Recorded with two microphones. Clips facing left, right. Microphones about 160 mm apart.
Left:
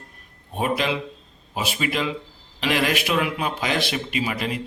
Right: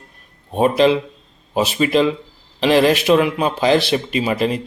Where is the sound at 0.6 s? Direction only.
35° right (ahead or behind).